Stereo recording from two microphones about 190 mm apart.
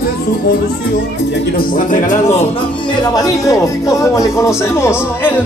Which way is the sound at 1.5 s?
45° left (ahead or behind).